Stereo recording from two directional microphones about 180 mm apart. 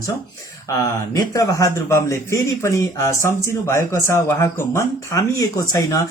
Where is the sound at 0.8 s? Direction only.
20° left (ahead or behind).